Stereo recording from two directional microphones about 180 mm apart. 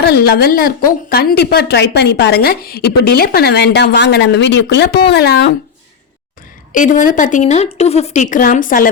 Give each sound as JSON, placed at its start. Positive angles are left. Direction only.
{"t": 0.0, "sound": "a woman's voice", "side_deg": 60}
{"t": 6.7, "sound": "a woman's voice", "side_deg": 45}